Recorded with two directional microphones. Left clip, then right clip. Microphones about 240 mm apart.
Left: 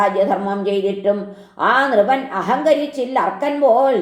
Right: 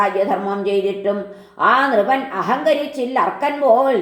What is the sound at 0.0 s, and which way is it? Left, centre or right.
A woman's voice, left.